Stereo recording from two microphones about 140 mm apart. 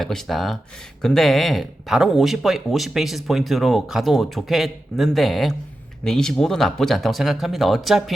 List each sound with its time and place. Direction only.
0.0 s speech: centre (ahead or behind)